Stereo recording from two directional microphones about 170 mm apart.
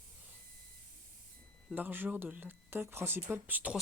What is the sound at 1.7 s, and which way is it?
Speech, 10° right (ahead or behind).